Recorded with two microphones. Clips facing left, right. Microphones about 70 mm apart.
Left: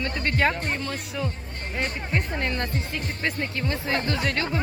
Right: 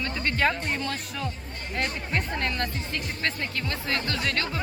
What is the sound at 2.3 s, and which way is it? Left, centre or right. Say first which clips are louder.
Speech: left 1 dB; left.